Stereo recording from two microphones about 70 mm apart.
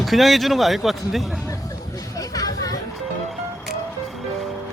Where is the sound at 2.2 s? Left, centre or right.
Left.